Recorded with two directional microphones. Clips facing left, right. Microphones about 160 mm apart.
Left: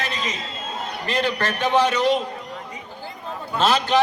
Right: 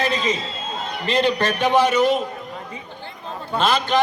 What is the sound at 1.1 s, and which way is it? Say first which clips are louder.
A man's voice: right 4 dB; 20° right (ahead or behind).